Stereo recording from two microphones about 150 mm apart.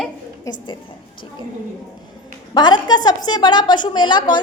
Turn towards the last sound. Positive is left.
turn(degrees=30)  # may be behind; listen again after turning